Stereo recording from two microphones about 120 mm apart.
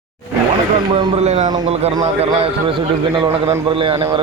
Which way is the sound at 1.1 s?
65° right (ahead or behind).